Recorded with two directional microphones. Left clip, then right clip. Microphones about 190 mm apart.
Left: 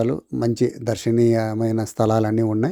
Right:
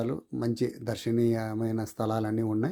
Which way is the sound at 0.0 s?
35° left (ahead or behind).